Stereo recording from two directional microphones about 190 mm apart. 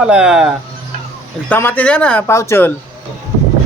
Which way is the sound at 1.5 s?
10° left (ahead or behind).